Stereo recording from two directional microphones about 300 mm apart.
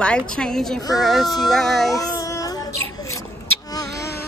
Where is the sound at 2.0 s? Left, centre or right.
Centre.